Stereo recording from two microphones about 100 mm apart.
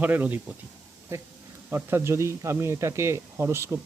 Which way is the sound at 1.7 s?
25° right (ahead or behind).